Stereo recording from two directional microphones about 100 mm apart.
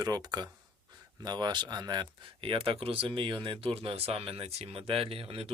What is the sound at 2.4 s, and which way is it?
Speech, 65° right (ahead or behind).